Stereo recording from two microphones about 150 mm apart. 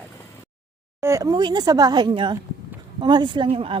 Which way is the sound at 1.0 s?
20° right (ahead or behind).